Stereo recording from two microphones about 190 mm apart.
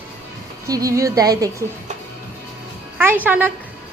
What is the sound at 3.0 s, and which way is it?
Speech, 10° right (ahead or behind).